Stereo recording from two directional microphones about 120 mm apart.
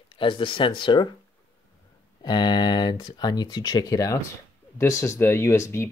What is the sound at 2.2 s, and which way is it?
Speech, 35° left (ahead or behind).